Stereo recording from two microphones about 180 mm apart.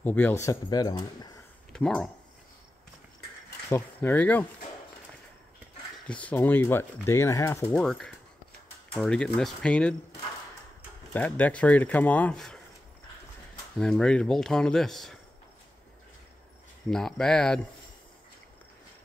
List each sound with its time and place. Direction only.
0.0 s speech: 10° left (ahead or behind)
1.7 s speech: 5° left (ahead or behind)
3.7 s speech: 10° left (ahead or behind)
6.0 s speech: 5° left (ahead or behind)
7.7 s speech: 5° left (ahead or behind)
11.1 s speech: 10° left (ahead or behind)
13.7 s speech: 5° left (ahead or behind)
16.9 s speech: 5° left (ahead or behind)